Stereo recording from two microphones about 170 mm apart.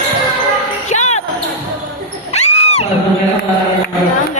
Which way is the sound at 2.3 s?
40° left (ahead or behind).